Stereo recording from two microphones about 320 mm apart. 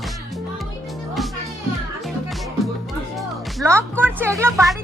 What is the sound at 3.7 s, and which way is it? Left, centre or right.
A woman's voice, centre.